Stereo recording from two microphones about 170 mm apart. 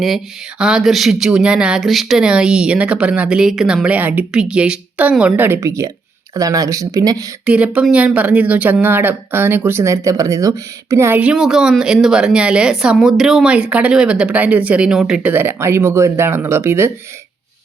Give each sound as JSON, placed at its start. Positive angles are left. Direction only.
{"t": 0.6, "sound": "speech", "side_deg": -5}
{"t": 7.4, "sound": "speech", "side_deg": -5}